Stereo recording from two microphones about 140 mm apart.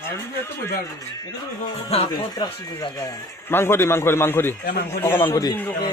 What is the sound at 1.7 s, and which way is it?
Speech, 45° left (ahead or behind).